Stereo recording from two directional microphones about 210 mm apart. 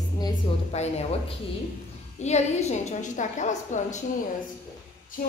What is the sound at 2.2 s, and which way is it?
A woman's voice, 35° left (ahead or behind).